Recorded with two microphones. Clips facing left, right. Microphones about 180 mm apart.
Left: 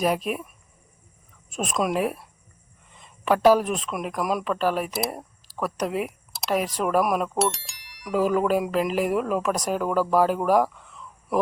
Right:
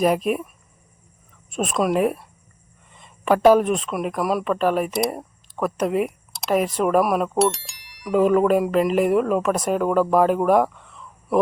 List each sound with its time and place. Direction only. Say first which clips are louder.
0.0 s speech: right 5 dB; centre (ahead or behind)
1.5 s speech: right 4 dB; centre (ahead or behind)